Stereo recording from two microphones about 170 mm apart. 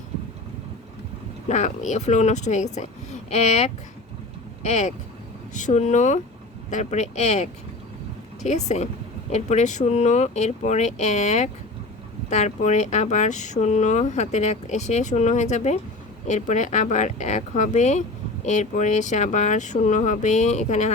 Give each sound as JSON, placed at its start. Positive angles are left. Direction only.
{"t": 1.5, "sound": "a woman's voice", "side_deg": 45}